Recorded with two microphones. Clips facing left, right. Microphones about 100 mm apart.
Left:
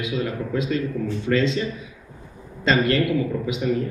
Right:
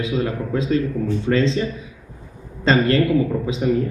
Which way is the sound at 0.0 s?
35° right (ahead or behind).